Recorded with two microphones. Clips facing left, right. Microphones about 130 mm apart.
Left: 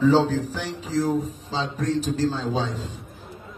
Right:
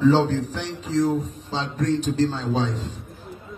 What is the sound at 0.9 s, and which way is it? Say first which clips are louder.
Speech: right 2 dB; centre (ahead or behind).